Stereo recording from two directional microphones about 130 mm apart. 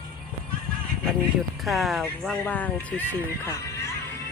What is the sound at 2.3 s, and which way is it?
Speech, 10° left (ahead or behind).